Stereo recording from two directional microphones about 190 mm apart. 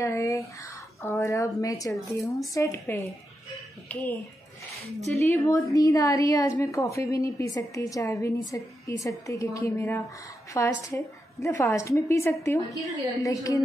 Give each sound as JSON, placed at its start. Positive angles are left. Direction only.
{"t": 0.0, "sound": "a woman's voice", "side_deg": 15}
{"t": 5.2, "sound": "a woman's voice", "side_deg": 15}